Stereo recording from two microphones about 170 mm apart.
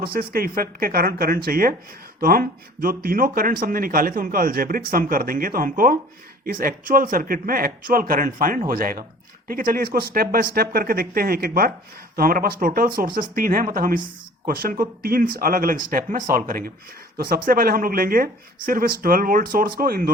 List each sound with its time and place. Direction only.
0.0 s speech: 60° right (ahead or behind)